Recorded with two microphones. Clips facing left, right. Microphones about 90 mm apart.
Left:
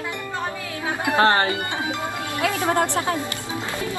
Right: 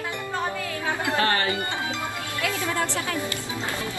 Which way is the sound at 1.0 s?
20° left (ahead or behind).